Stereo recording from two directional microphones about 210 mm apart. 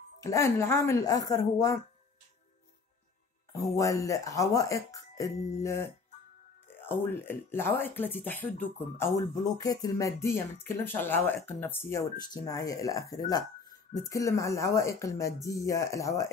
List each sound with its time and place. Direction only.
0.2 s speech: 15° left (ahead or behind)
3.5 s speech: 15° left (ahead or behind)
7.1 s speech: 10° left (ahead or behind)